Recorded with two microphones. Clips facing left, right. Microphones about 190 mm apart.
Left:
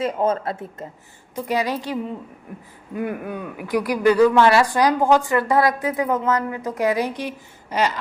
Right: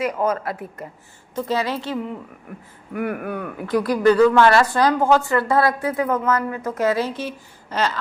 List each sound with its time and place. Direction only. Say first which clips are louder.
0.0 s speech: left 1 dB; 25° left (ahead or behind)
1.4 s speech: even; 15° left (ahead or behind)